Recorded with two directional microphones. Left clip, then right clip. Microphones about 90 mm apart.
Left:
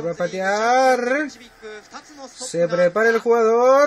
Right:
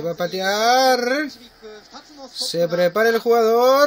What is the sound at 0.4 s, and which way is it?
Speech, 25° right (ahead or behind).